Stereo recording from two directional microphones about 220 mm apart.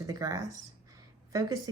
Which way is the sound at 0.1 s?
15° right (ahead or behind).